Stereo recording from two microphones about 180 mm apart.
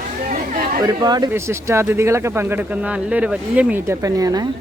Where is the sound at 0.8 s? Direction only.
20° right (ahead or behind).